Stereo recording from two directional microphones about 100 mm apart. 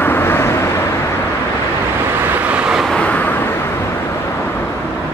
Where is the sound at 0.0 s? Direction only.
20° left (ahead or behind).